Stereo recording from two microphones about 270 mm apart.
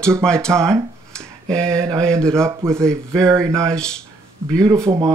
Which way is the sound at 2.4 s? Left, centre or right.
Centre.